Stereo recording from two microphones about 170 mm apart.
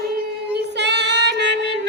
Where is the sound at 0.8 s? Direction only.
90° right.